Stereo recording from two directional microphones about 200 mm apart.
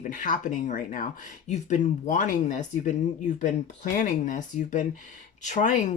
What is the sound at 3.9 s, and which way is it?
Speech, 40° left (ahead or behind).